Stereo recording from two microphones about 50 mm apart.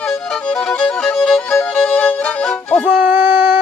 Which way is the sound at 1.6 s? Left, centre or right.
Left.